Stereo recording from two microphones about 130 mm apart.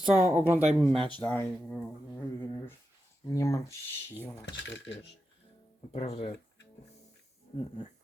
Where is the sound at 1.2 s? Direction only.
15° left (ahead or behind).